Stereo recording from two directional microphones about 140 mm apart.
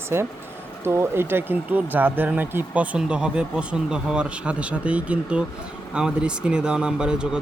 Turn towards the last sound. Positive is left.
turn(degrees=-5)  # may be behind; listen again after turning